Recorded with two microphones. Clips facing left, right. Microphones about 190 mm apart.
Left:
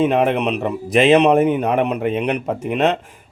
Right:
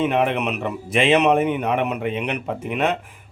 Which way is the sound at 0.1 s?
35° left (ahead or behind).